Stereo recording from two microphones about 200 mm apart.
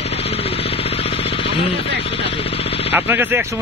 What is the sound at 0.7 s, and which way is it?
Jackhammer, 30° left (ahead or behind).